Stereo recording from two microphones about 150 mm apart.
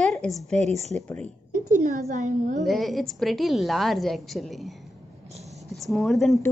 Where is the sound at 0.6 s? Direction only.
45° right (ahead or behind).